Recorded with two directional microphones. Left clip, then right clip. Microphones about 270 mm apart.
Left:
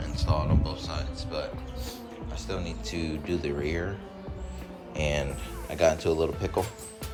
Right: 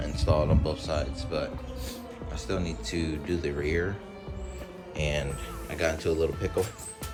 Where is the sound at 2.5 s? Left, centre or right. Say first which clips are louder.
Right 3 dB; centre.